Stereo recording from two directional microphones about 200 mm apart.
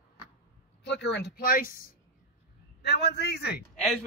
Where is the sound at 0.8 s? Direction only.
60° left (ahead or behind).